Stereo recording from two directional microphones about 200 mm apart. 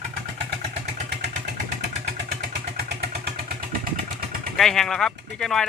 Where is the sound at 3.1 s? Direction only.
45° right (ahead or behind).